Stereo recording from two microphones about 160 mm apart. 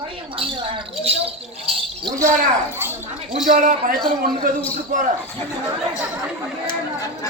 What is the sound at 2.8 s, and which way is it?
Speech, 15° right (ahead or behind).